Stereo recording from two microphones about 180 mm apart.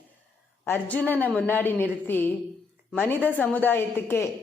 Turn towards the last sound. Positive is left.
turn(degrees=10)  # may be behind; listen again after turning